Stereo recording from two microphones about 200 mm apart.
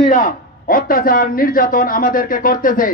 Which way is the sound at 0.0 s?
45° left (ahead or behind).